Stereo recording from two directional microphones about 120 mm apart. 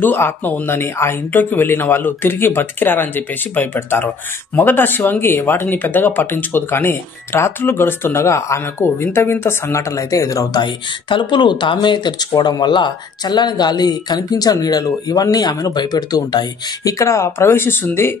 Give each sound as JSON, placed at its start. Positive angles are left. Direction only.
{"t": 0.0, "sound": "speech", "side_deg": 15}